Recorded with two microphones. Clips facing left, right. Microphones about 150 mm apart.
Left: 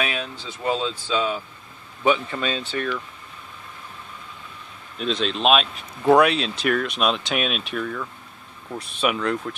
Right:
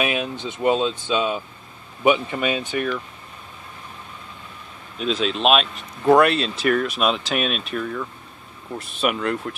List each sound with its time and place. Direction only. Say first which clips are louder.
0.0 s speech: right 4 dB; 15° right (ahead or behind)
4.9 s speech: right 2 dB; 5° right (ahead or behind)